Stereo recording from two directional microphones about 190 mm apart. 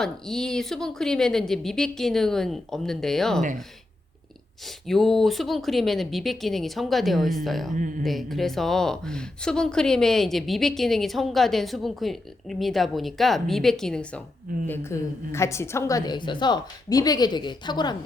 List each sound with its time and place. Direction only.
0.0 s speech: 5° left (ahead or behind)
4.9 s speech: centre (ahead or behind)
7.7 s speech: 45° right (ahead or behind)
8.0 s speech: centre (ahead or behind)
14.7 s a woman's voice: 15° left (ahead or behind)